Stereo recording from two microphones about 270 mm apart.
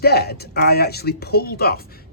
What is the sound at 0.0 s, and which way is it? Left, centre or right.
Speech, left.